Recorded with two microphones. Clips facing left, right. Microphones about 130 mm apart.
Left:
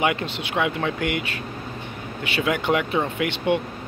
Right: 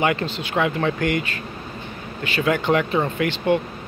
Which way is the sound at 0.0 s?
10° left (ahead or behind).